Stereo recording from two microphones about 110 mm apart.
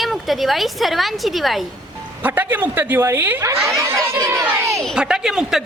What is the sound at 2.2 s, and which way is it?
A woman's voice, 15° right (ahead or behind).